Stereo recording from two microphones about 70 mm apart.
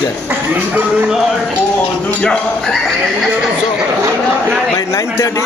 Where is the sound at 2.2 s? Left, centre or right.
Centre.